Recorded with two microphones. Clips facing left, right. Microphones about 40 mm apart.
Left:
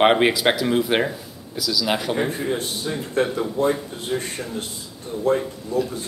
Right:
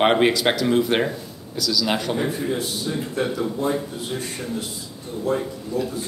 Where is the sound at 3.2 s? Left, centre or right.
Left.